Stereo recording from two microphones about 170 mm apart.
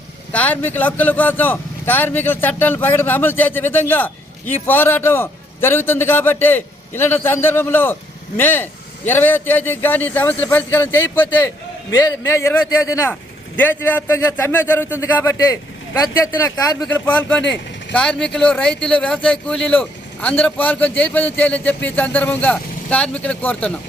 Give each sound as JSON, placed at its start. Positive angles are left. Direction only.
{"t": 0.3, "sound": "speech", "side_deg": 10}
{"t": 17.4, "sound": "speech", "side_deg": 90}
{"t": 17.9, "sound": "speech", "side_deg": 5}